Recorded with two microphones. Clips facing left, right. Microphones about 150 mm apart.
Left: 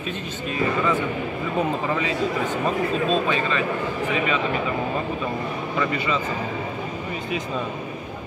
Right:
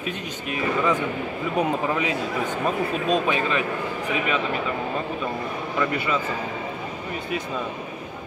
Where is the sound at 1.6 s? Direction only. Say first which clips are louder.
Right 1 dB; 10° right (ahead or behind).